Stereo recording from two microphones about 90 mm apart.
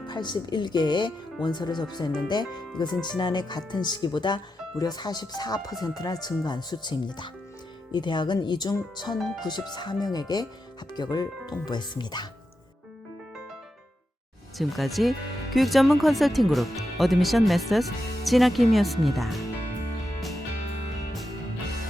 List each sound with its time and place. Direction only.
0.1 s speech: 55° left (ahead or behind)
9.1 s speech: centre (ahead or behind)
9.4 s speech: 50° left (ahead or behind)
14.6 s speech: centre (ahead or behind)